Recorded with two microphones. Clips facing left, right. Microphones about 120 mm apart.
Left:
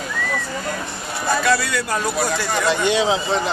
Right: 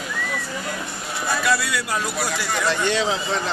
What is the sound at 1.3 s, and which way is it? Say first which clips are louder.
Speech: left 3 dB; 5° right (ahead or behind).